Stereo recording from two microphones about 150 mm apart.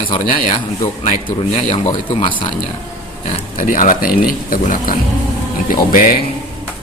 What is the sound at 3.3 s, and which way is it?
Speech, 60° left (ahead or behind).